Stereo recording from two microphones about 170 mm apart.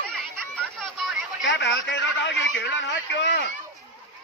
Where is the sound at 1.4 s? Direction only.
80° left.